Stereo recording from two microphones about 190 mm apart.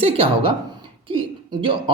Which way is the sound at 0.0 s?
30° right (ahead or behind).